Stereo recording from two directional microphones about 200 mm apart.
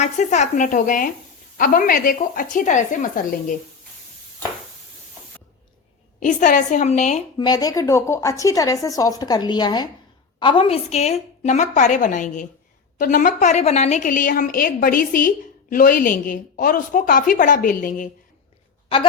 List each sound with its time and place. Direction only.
0.0 s a woman's voice: 35° left (ahead or behind)
6.1 s a woman's voice: 40° left (ahead or behind)
7.3 s a woman's voice: 20° left (ahead or behind); by 18.1 s 40° left (ahead or behind)